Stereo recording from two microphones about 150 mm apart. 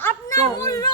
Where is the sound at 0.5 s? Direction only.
20° left (ahead or behind).